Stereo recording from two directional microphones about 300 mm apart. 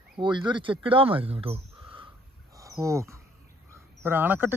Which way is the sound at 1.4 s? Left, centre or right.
Centre.